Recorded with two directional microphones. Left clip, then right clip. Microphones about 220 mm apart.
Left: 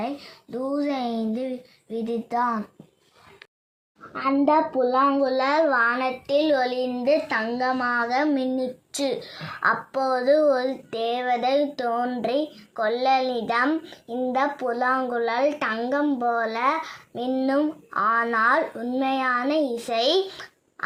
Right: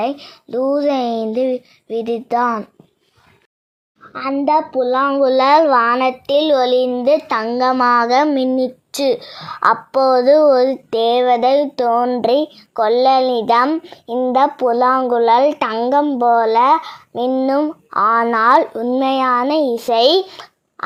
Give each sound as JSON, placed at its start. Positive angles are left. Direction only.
{"t": 0.0, "sound": "speech", "side_deg": -45}
{"t": 4.2, "sound": "a woman's voice", "side_deg": -40}